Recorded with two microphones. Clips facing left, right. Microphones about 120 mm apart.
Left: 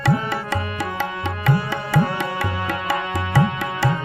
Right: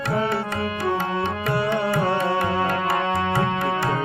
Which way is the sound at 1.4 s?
90° left.